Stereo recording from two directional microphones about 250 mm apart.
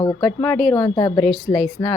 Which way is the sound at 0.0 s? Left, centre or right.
Centre.